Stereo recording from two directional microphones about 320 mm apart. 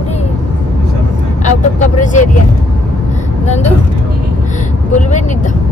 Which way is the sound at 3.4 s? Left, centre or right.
Left.